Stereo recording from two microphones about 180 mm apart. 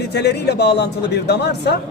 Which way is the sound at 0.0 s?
70° left (ahead or behind).